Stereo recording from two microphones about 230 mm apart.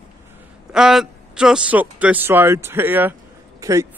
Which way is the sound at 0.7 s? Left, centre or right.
Centre.